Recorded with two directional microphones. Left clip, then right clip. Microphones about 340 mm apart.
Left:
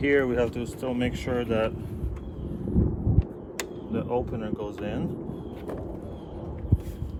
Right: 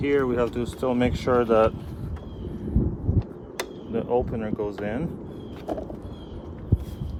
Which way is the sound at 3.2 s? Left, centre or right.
Centre.